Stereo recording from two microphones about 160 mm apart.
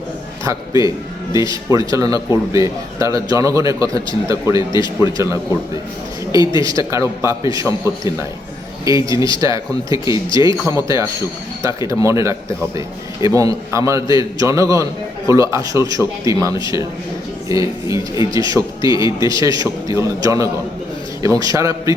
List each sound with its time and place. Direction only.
0.4 s a man's voice: 20° right (ahead or behind)
6.7 s a man's voice: 20° right (ahead or behind)
10.2 s speech: 30° left (ahead or behind)
10.7 s a man's voice: 20° right (ahead or behind)